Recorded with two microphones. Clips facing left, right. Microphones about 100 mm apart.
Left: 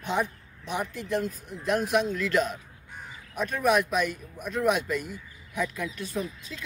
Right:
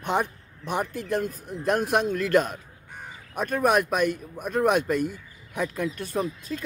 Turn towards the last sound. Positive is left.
turn(degrees=-50)  # may be behind; listen again after turning